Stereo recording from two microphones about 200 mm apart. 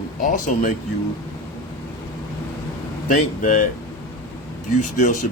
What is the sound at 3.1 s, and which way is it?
Speech, 40° left (ahead or behind).